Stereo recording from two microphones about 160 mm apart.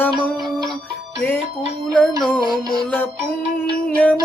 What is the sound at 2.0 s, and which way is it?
Music, centre (ahead or behind).